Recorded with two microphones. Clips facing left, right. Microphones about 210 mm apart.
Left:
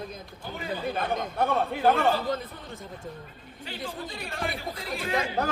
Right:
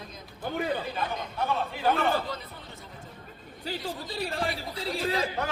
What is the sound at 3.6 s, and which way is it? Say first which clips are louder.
A man's voice: right 2 dB; 35° right (ahead or behind).